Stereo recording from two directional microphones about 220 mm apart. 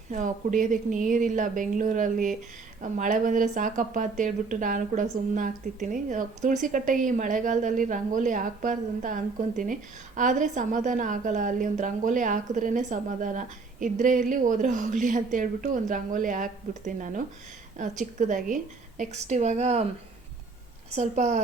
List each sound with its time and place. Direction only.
0.1 s a woman's voice: 35° right (ahead or behind)
20.9 s a woman's voice: 30° right (ahead or behind)